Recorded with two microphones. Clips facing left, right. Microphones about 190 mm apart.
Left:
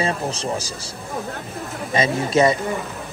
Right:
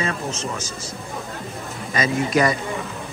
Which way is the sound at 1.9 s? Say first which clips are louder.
Left 2 dB; 25° left (ahead or behind).